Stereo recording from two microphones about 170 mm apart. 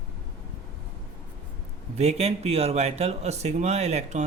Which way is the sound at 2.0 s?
40° right (ahead or behind).